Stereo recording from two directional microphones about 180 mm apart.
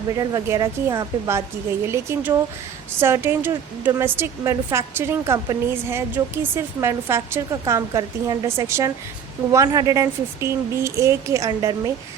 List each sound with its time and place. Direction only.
0.2 s a woman's voice: 15° right (ahead or behind)